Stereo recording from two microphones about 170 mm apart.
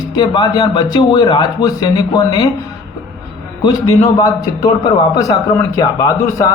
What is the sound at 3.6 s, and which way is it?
A man's voice, 25° left (ahead or behind).